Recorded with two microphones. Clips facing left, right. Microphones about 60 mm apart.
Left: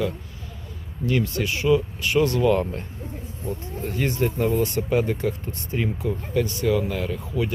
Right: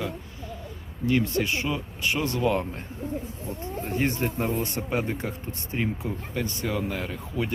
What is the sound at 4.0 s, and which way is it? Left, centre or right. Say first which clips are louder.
Speech: left 4 dB; right.